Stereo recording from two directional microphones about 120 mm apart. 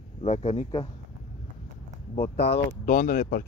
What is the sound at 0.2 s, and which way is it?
Speech, 65° left (ahead or behind).